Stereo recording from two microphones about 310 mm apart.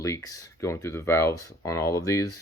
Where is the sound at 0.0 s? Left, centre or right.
Centre.